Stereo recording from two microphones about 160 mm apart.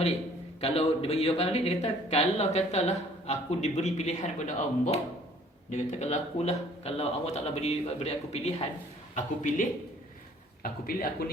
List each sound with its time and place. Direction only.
0.6 s speech: 40° left (ahead or behind)
10.6 s speech: 65° left (ahead or behind)